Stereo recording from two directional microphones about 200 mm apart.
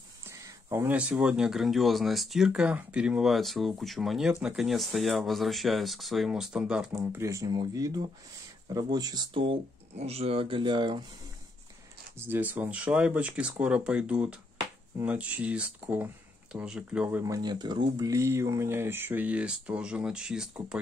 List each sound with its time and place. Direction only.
0.3 s speech: 15° right (ahead or behind)
6.9 s speech: 15° right (ahead or behind)
12.2 s speech: 10° right (ahead or behind)